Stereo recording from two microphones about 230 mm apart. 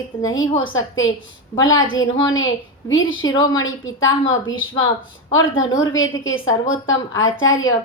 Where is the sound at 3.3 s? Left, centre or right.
Centre.